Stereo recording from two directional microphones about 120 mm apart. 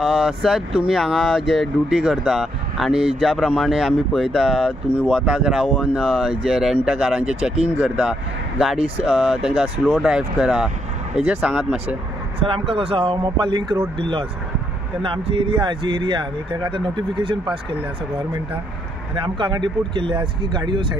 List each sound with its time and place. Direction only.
0.0 s speech: centre (ahead or behind)
7.7 s speech: 15° right (ahead or behind)
8.0 s speech: centre (ahead or behind)
8.7 s speech: 55° right (ahead or behind)
9.0 s speech: centre (ahead or behind)
12.4 s speech: 50° right (ahead or behind)
19.1 s speech: 45° right (ahead or behind)